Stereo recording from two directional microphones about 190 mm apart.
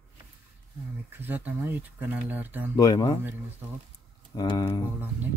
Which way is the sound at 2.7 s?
20° left (ahead or behind).